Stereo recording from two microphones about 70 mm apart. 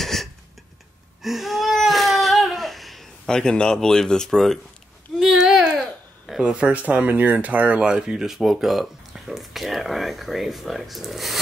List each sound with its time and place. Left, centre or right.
0.0 s a sound: centre
1.2 s baby cry: centre
3.3 s speech: centre
5.2 s a sound: centre
5.8 s babbling: centre
6.4 s speech: centre